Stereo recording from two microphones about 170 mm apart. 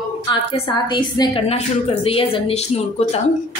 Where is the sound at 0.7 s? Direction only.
25° left (ahead or behind).